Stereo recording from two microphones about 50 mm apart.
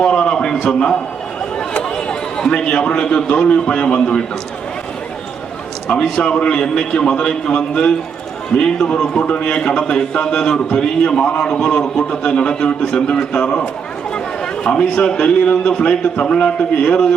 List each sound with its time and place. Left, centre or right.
0.0 s a sound: centre
0.5 s a man's voice: centre
5.9 s a man's voice: centre
14.6 s speech: centre